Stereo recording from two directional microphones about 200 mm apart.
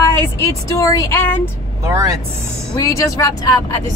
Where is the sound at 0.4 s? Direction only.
15° left (ahead or behind).